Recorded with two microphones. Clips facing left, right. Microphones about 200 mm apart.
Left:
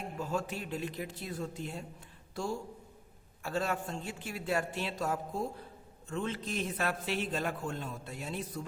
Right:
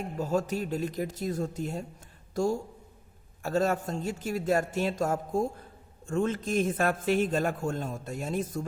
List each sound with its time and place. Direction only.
0.2 s a woman's voice: 40° right (ahead or behind)